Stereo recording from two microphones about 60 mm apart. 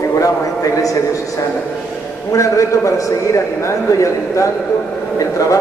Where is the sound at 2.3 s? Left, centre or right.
Left.